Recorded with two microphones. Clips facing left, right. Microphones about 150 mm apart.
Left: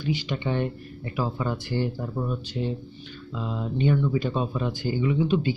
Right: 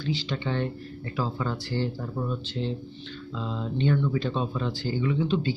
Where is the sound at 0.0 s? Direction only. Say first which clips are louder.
Left 2 dB; 15° left (ahead or behind).